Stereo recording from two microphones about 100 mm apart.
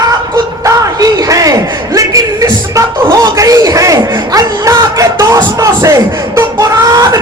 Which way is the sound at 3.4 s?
35° right (ahead or behind).